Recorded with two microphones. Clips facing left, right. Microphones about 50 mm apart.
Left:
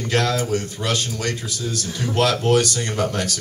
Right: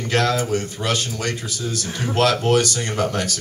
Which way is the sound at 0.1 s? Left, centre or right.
Centre.